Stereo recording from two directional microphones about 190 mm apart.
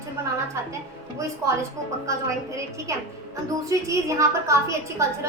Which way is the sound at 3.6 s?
15° right (ahead or behind).